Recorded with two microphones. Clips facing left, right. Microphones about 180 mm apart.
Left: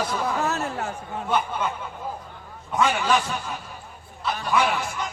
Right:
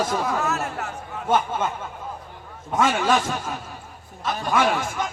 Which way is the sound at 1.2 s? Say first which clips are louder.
Right 3 dB; 45° right (ahead or behind).